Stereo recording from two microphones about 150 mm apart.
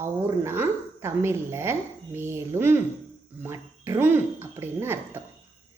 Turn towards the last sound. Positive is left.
turn(degrees=-15)  # may be behind; listen again after turning